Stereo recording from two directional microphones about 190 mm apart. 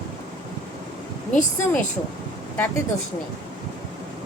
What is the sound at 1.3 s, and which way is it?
Speech, 40° left (ahead or behind).